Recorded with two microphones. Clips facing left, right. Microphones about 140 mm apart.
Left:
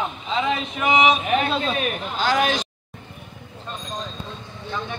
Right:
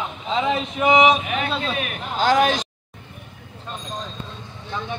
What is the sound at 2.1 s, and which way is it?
Speech, 45° right (ahead or behind).